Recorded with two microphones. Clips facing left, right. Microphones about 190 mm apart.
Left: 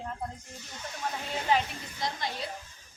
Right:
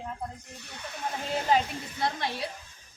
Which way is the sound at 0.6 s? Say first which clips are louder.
Even; 65° right (ahead or behind).